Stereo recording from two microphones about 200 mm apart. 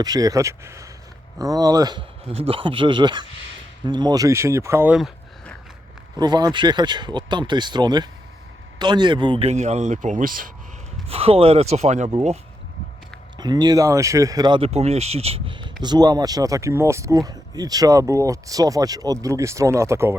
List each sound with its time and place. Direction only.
0.0 s speech: 20° right (ahead or behind); by 5.5 s centre (ahead or behind)
6.1 s speech: 20° right (ahead or behind); by 10.5 s 45° right (ahead or behind)
11.1 s speech: 30° right (ahead or behind)
13.4 s speech: 20° right (ahead or behind)